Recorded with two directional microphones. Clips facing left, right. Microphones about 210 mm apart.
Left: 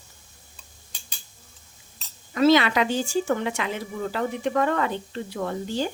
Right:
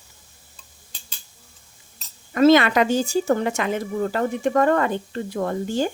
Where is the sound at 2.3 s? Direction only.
50° right (ahead or behind).